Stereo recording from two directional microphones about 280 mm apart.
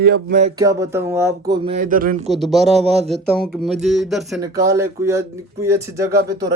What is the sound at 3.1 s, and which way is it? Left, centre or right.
Speech, centre.